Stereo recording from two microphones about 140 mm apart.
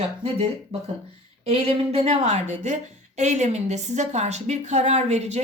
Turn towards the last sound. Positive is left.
turn(degrees=-50)  # may be behind; listen again after turning